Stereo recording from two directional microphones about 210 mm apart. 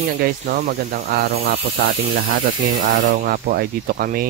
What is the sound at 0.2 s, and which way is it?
Speech, 45° right (ahead or behind).